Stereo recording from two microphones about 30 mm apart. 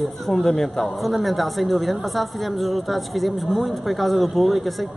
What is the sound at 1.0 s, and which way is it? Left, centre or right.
A woman's voice, centre.